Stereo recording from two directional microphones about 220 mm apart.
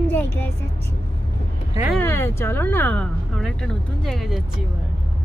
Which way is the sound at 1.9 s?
10° left (ahead or behind).